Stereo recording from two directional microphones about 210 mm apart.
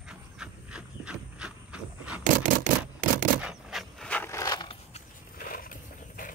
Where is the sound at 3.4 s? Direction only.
5° right (ahead or behind); by 5.0 s 20° left (ahead or behind).